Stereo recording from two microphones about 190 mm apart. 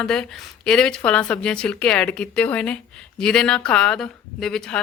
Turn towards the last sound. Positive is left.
turn(degrees=5)  # may be behind; listen again after turning